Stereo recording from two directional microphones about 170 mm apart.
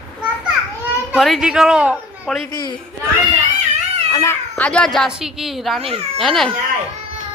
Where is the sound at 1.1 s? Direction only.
Centre (ahead or behind).